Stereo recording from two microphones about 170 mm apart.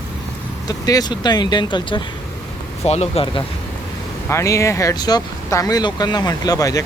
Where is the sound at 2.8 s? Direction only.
40° left (ahead or behind).